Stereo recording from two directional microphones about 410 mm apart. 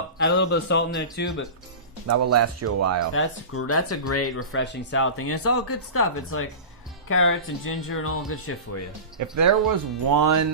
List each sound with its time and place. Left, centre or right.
0.3 s a man's voice: left
2.0 s speech: right
3.1 s speech: left
9.3 s speech: right